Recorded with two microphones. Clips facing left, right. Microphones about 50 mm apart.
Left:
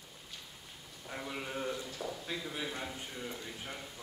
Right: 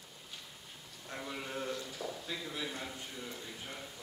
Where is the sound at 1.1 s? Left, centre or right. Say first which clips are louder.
Left 1 dB; centre.